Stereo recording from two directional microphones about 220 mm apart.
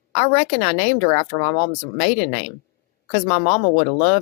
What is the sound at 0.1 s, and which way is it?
Speech, 30° left (ahead or behind).